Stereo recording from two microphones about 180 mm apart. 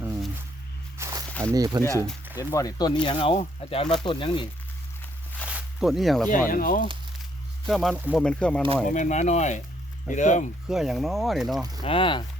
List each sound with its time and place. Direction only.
0.9 s walk: 15° right (ahead or behind)
1.3 s a sound: 5° left (ahead or behind)
1.5 s speech: 20° right (ahead or behind)
1.8 s speech: 15° left (ahead or behind)
5.5 s zipper: 5° right (ahead or behind)
6.5 s speech: 50° left (ahead or behind)
7.7 s speech: centre (ahead or behind)
8.9 s speech: 40° left (ahead or behind)
10.7 s speech: centre (ahead or behind)
11.8 s speech: 30° left (ahead or behind)